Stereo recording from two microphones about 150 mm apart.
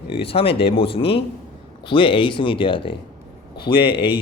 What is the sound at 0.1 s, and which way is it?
Speech, 40° left (ahead or behind).